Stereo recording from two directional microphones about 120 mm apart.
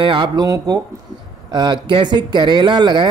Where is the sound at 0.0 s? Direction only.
40° right (ahead or behind).